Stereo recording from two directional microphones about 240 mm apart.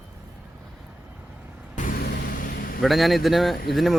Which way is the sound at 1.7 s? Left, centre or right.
Left.